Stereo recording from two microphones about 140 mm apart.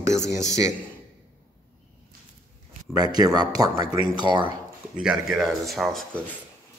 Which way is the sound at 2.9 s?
30° right (ahead or behind).